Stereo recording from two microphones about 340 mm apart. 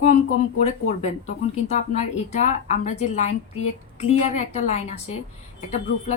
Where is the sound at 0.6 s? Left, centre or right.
Centre.